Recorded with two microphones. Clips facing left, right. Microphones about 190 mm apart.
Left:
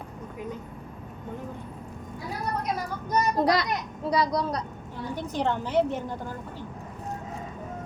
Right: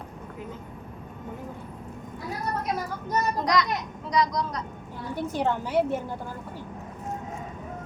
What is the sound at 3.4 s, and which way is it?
A woman's voice, 30° left (ahead or behind).